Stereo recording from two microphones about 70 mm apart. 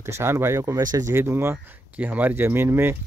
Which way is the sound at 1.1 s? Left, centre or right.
Right.